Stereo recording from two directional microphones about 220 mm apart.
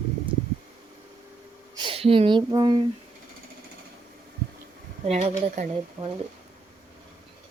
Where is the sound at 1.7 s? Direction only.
25° right (ahead or behind).